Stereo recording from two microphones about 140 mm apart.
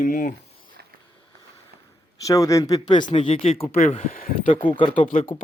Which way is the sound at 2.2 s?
25° left (ahead or behind).